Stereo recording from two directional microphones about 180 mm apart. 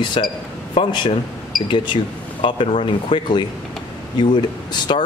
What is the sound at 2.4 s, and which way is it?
Speech, 25° left (ahead or behind).